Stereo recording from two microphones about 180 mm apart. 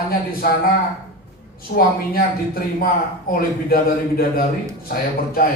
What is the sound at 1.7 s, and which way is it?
Speech, 55° left (ahead or behind).